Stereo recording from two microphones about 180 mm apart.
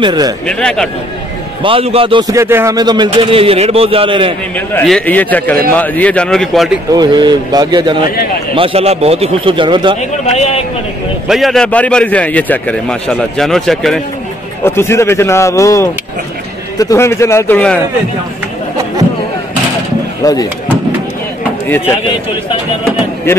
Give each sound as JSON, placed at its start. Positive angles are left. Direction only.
{"t": 0.0, "sound": "a man's voice", "side_deg": -25}
{"t": 0.5, "sound": "a man's voice", "side_deg": 5}
{"t": 1.6, "sound": "a man's voice", "side_deg": -30}
{"t": 4.6, "sound": "a man's voice", "side_deg": 5}
{"t": 6.9, "sound": "a man's voice", "side_deg": -25}
{"t": 10.2, "sound": "a man's voice", "side_deg": 35}
{"t": 11.2, "sound": "a man's voice", "side_deg": 0}
{"t": 14.6, "sound": "speech", "side_deg": 15}